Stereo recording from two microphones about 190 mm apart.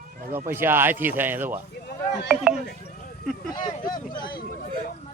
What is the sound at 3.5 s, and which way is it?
Speech, 20° left (ahead or behind).